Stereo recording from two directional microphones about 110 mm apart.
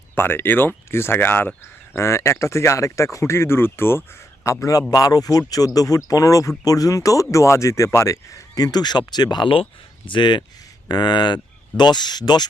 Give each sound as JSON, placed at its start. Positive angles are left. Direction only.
{"t": 0.2, "sound": "speech", "side_deg": 20}